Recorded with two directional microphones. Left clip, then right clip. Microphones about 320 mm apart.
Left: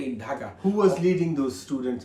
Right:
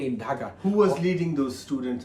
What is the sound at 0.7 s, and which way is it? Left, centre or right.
Speech, centre.